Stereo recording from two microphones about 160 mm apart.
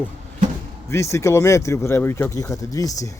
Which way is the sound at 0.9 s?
15° left (ahead or behind).